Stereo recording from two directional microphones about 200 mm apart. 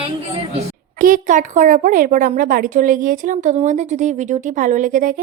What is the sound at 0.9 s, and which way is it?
A woman's voice, 45° right (ahead or behind).